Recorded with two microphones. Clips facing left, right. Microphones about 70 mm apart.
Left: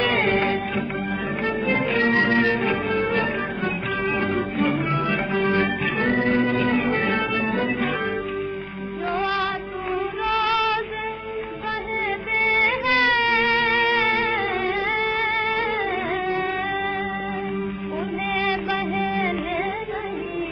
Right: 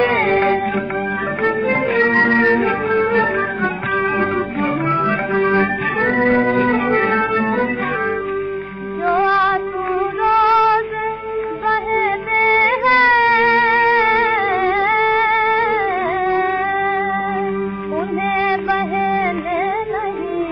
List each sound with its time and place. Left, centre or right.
0.0 s music: right
6.0 s music: right
9.2 s music: right
11.6 s music: right
12.8 s music: right
18.4 s music: right